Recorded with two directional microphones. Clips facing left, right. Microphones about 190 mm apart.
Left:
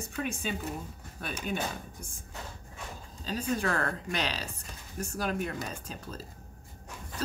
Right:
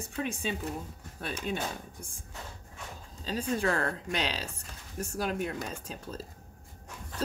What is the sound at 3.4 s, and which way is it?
Speech, 30° right (ahead or behind).